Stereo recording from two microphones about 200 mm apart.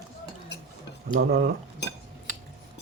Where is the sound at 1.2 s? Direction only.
55° right (ahead or behind).